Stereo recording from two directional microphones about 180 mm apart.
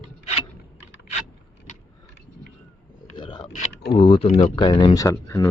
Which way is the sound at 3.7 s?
65° left (ahead or behind).